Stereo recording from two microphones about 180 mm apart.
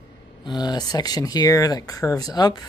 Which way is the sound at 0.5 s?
25° left (ahead or behind).